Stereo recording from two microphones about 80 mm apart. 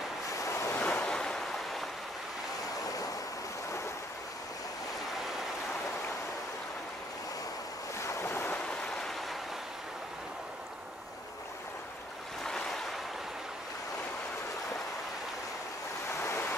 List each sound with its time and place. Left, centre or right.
0.4 s waves: left
0.7 s waves: centre
8.1 s waves: left
8.5 s a sound: centre
12.4 s waves: centre
16.2 s waves: left